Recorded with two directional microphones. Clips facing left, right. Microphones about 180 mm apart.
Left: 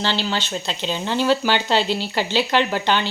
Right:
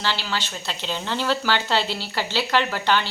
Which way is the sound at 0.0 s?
25° left (ahead or behind).